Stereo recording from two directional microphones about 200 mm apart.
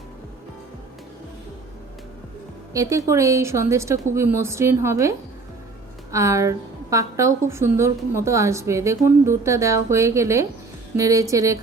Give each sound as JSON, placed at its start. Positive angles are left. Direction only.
{"t": 2.7, "sound": "a woman's voice", "side_deg": -15}